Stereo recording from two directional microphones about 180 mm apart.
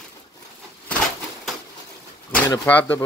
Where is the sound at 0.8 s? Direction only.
10° left (ahead or behind).